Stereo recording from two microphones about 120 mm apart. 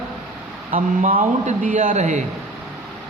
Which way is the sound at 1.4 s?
90° right.